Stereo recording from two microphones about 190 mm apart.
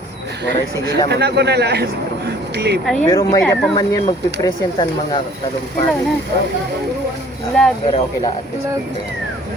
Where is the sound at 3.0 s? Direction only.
15° left (ahead or behind).